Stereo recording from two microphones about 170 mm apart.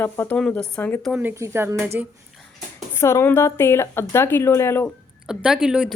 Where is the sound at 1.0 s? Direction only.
5° right (ahead or behind).